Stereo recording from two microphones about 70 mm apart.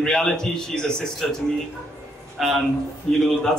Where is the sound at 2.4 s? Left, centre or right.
Centre.